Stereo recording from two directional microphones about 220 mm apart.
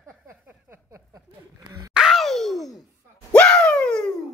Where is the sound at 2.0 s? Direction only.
Centre (ahead or behind).